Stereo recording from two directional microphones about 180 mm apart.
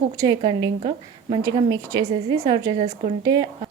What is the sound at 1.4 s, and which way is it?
Speech, 20° right (ahead or behind).